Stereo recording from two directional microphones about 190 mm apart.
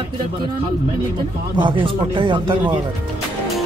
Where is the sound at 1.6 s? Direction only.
25° right (ahead or behind).